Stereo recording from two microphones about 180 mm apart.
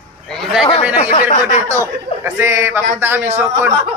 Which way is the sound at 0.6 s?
30° left (ahead or behind).